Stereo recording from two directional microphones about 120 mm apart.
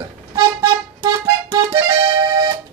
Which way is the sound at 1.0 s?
40° right (ahead or behind).